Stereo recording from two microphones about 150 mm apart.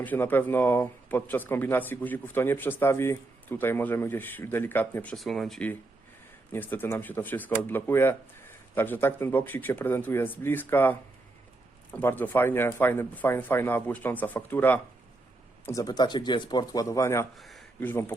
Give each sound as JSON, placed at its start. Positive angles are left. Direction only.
{"t": 0.0, "sound": "speech", "side_deg": 10}
{"t": 5.1, "sound": "speech", "side_deg": 0}
{"t": 17.3, "sound": "a sound", "side_deg": 0}
{"t": 17.7, "sound": "speech", "side_deg": 15}